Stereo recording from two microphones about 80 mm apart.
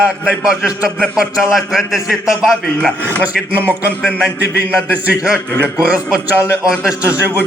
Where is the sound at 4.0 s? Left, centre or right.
Centre.